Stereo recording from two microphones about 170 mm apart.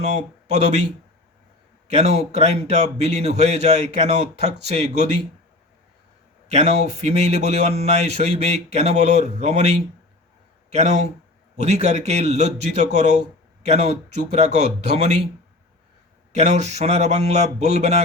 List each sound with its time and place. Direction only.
0.0 s speech: 40° right (ahead or behind)
1.9 s speech: 40° right (ahead or behind)
6.5 s speech: 40° right (ahead or behind)
16.3 s speech: 40° right (ahead or behind)